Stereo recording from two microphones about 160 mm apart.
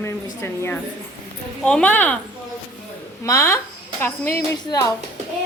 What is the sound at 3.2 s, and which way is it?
A woman's voice, 20° left (ahead or behind).